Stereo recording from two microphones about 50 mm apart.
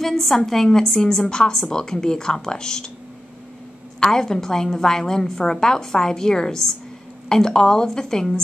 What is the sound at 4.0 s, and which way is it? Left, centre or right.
A woman's voice, centre.